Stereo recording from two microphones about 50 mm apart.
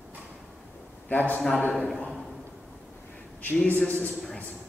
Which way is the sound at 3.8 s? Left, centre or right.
Left.